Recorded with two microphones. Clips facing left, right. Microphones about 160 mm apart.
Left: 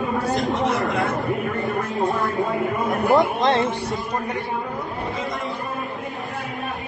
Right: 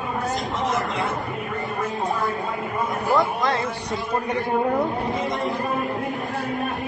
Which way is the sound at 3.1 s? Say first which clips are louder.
Left 4 dB; 20° left (ahead or behind).